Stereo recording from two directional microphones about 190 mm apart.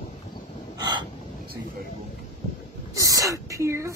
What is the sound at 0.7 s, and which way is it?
Hiccup, 25° right (ahead or behind).